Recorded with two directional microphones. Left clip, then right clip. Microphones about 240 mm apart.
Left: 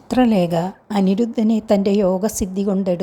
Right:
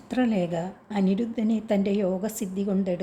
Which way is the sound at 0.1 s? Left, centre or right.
Left.